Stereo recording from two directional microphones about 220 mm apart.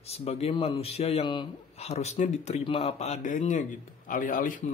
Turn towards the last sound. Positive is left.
turn(degrees=35)  # may be behind; listen again after turning